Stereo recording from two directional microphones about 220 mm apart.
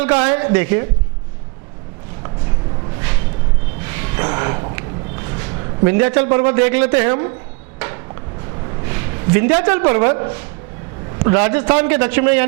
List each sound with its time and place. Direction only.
0.0 s a man's voice: 15° right (ahead or behind)
3.8 s a sound: 15° right (ahead or behind)
5.4 s a man's voice: 20° right (ahead or behind)
8.9 s a woman's voice: 15° right (ahead or behind)